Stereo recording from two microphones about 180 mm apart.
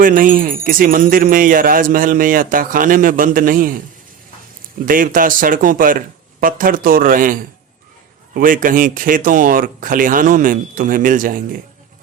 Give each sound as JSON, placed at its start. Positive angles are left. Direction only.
{"t": 0.0, "sound": "speech", "side_deg": -50}
{"t": 4.9, "sound": "speech", "side_deg": -50}